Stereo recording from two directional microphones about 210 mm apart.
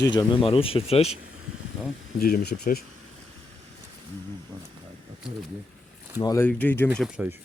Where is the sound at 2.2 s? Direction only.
45° left (ahead or behind).